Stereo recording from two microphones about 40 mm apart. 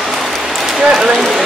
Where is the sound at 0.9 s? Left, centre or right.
Centre.